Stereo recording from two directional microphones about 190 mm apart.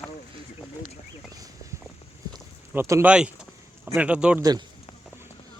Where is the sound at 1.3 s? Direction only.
20° right (ahead or behind).